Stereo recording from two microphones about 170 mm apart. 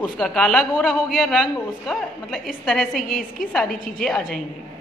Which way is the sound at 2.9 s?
55° left (ahead or behind).